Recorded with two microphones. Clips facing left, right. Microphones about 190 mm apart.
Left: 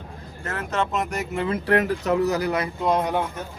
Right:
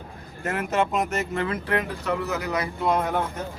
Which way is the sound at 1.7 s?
40° left (ahead or behind).